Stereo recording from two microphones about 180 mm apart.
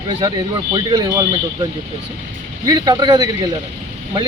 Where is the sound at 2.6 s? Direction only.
20° right (ahead or behind).